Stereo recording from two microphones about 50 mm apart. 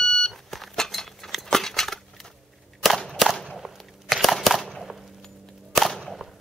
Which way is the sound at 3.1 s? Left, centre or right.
Centre.